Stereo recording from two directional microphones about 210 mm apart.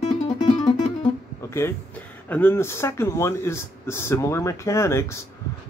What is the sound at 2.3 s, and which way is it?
Speech, 10° left (ahead or behind).